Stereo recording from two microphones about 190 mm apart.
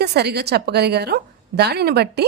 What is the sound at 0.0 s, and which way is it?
A woman's voice, 60° right (ahead or behind).